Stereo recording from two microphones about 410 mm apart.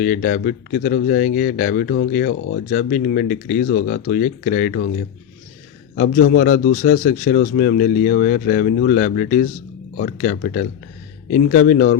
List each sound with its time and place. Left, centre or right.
0.0 s speech: left
6.0 s speech: left